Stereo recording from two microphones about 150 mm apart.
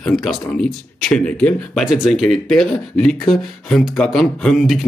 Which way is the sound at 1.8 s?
5° right (ahead or behind).